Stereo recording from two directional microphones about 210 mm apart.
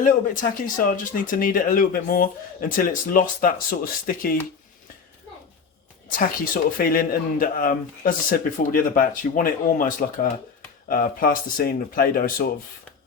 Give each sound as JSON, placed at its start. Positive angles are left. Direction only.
{"t": 0.6, "sound": "speech", "side_deg": 40}
{"t": 6.1, "sound": "speech", "side_deg": 40}